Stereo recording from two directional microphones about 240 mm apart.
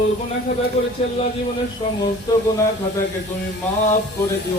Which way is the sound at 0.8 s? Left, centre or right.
Left.